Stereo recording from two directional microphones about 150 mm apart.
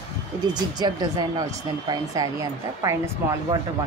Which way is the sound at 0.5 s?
30° right (ahead or behind).